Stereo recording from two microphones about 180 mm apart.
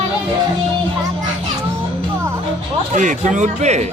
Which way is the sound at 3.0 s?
45° right (ahead or behind).